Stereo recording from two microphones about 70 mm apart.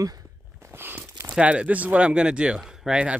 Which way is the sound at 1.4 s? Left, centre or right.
Centre.